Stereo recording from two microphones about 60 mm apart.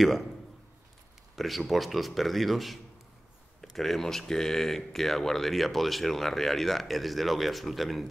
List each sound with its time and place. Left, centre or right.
1.3 s speech: centre